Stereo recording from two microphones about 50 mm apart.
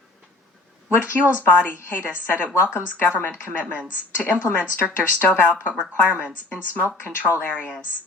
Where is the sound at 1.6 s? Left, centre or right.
Left.